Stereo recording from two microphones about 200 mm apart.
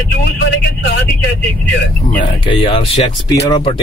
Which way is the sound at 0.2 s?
60° left (ahead or behind).